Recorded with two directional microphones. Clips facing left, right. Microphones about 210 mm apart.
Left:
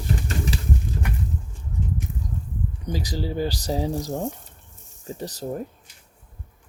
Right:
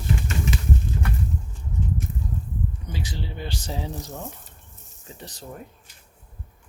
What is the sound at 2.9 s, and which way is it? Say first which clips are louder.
Speech: left 7 dB; 40° left (ahead or behind).